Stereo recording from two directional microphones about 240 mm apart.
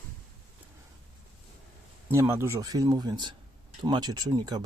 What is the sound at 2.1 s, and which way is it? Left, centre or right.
Speech, centre.